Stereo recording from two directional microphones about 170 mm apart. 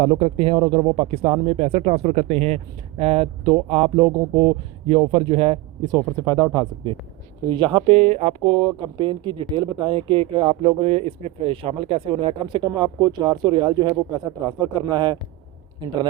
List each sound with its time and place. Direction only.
0.0 s speech: 35° right (ahead or behind)